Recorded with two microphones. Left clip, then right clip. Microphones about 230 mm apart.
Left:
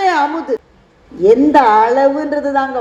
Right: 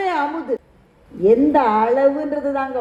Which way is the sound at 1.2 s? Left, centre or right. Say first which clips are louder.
Left 6 dB; left.